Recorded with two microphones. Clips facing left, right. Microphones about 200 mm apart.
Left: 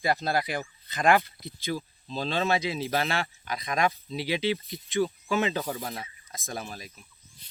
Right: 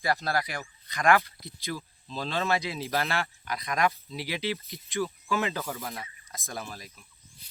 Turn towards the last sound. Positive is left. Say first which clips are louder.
# left 2 dB
turn(degrees=15)  # may be behind; listen again after turning